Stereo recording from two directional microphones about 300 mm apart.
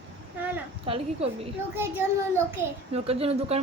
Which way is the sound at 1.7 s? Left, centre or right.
Centre.